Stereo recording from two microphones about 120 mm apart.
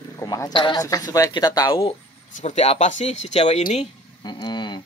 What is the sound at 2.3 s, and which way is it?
Speech, 75° left (ahead or behind).